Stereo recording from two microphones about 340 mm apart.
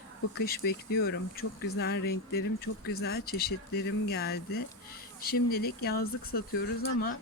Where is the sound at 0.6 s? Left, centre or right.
Left.